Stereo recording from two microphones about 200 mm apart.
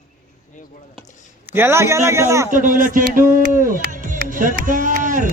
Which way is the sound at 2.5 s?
40° right (ahead or behind).